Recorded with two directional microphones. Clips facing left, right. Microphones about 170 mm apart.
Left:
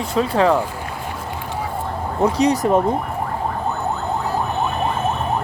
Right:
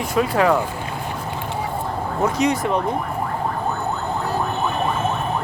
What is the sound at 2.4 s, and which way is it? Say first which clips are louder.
Speech: left 5 dB; 40° left (ahead or behind).